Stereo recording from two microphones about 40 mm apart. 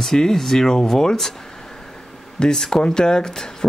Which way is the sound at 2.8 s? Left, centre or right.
Centre.